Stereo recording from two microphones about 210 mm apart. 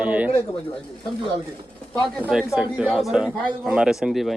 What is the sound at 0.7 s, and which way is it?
A man's voice, 5° left (ahead or behind).